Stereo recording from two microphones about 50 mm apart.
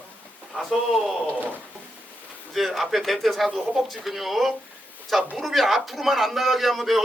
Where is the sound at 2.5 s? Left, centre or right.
Centre.